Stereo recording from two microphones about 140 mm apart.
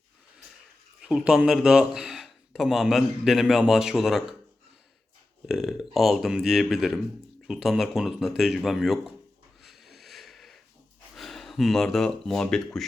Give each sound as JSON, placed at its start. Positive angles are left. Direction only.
{"t": 1.0, "sound": "speech", "side_deg": -5}
{"t": 5.5, "sound": "speech", "side_deg": 0}
{"t": 9.6, "sound": "a sound", "side_deg": 0}
{"t": 11.1, "sound": "speech", "side_deg": 0}